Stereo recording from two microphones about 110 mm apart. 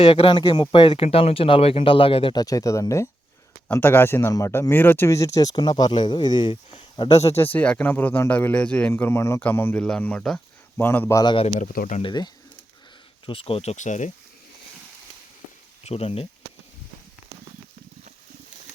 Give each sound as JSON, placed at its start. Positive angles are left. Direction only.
{"t": 0.0, "sound": "speech", "side_deg": 55}
{"t": 2.3, "sound": "speech", "side_deg": 35}
{"t": 7.1, "sound": "speech", "side_deg": 80}
{"t": 7.3, "sound": "speech", "side_deg": 15}
{"t": 8.9, "sound": "speech", "side_deg": 25}
{"t": 10.3, "sound": "a sound", "side_deg": 20}
{"t": 11.1, "sound": "speech", "side_deg": 40}
{"t": 13.2, "sound": "speech", "side_deg": 55}
{"t": 15.8, "sound": "speech", "side_deg": 70}